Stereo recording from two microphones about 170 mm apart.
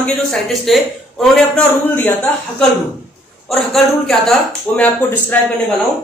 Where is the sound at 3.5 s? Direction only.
Centre (ahead or behind).